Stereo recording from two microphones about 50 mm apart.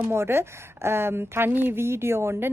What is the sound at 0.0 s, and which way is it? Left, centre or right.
A woman's voice, right.